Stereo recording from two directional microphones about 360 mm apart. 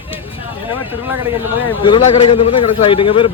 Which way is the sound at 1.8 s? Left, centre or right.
Centre.